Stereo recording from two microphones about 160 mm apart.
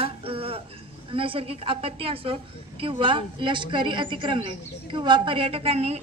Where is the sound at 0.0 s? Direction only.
35° right (ahead or behind).